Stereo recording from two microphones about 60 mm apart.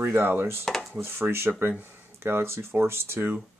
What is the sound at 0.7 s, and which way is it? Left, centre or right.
Speech, centre.